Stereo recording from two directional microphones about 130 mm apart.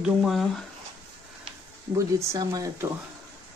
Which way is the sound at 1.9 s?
25° right (ahead or behind).